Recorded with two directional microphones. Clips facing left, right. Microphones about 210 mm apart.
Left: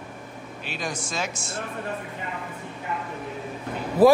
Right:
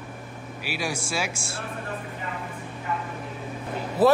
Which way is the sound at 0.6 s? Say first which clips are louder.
Right 2 dB; 10° right (ahead or behind).